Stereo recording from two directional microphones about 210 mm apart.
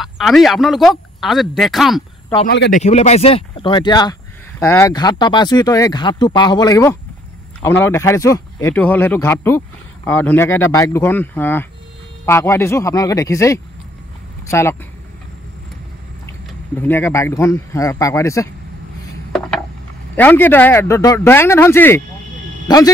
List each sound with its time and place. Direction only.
0.0 s speech: centre (ahead or behind)
2.4 s a man's voice: 55° left (ahead or behind)
2.7 s speech: 30° left (ahead or behind); by 14.8 s 15° left (ahead or behind)
16.3 s speech: 10° left (ahead or behind)
20.2 s speech: 10° left (ahead or behind)